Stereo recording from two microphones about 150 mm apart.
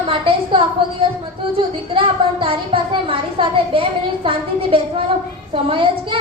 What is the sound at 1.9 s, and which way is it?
Speech, 35° right (ahead or behind).